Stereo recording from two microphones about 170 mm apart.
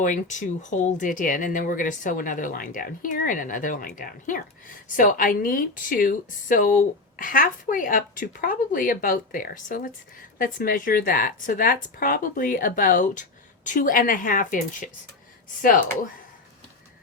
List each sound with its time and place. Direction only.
0.0 s a woman's voice: 45° left (ahead or behind)